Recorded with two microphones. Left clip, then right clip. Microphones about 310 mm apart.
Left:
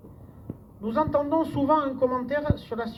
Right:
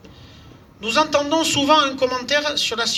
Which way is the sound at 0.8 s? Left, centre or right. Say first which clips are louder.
Right 6 dB; right.